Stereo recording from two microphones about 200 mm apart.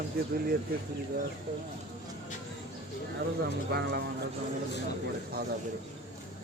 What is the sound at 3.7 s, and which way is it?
Speech, 55° right (ahead or behind).